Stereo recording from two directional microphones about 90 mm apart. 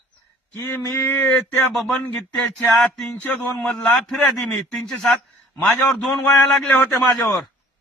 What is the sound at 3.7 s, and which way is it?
A man's voice, 5° left (ahead or behind).